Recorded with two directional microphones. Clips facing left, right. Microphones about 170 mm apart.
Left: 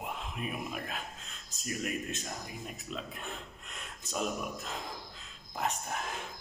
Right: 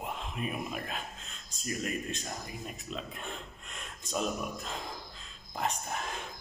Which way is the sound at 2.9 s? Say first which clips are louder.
Even; 5° left (ahead or behind).